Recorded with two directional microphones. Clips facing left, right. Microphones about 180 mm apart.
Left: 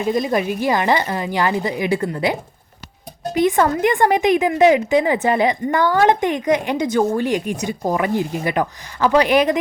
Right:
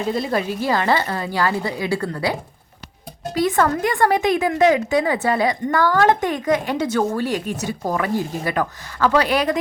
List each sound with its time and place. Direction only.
0.0 s speech: 15° left (ahead or behind)